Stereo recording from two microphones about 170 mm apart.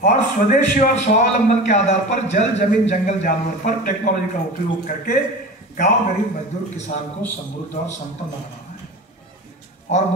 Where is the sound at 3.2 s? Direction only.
60° left (ahead or behind).